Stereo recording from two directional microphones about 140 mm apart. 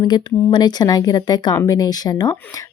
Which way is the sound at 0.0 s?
30° left (ahead or behind).